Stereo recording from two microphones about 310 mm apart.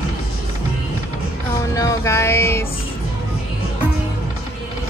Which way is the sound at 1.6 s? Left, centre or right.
Centre.